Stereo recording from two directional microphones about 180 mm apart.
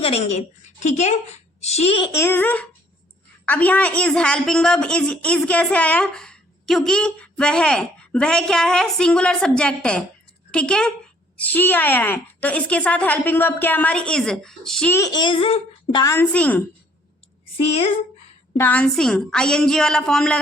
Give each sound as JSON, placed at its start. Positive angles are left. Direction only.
{"t": 0.0, "sound": "a woman's voice", "side_deg": 35}
{"t": 2.1, "sound": "a woman's voice", "side_deg": 10}
{"t": 14.9, "sound": "a child's voice", "side_deg": 20}
{"t": 17.6, "sound": "a woman's voice", "side_deg": 35}
{"t": 18.5, "sound": "a woman's voice", "side_deg": 10}